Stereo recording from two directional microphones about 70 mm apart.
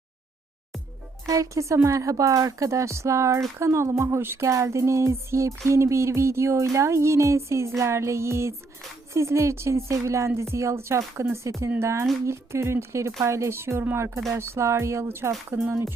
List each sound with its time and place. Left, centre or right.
1.3 s music: right
3.6 s speech: right
4.4 s music: right
12.2 s speech: right